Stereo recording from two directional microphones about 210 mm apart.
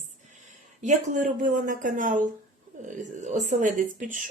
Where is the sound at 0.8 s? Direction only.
35° right (ahead or behind).